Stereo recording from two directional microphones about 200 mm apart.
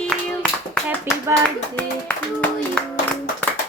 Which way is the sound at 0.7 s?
Centre (ahead or behind).